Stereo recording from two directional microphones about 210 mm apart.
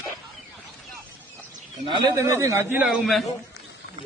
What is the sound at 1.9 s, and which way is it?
A man's voice, 20° right (ahead or behind).